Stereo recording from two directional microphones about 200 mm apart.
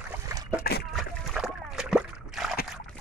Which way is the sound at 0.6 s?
50° left (ahead or behind).